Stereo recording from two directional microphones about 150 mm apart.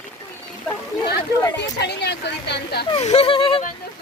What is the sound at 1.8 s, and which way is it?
Speech, 90° left.